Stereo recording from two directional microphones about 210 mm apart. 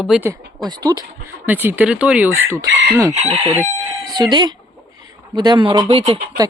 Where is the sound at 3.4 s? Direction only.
10° right (ahead or behind).